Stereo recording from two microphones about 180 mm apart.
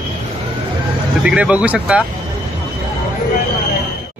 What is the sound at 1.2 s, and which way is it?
Speech, 5° right (ahead or behind).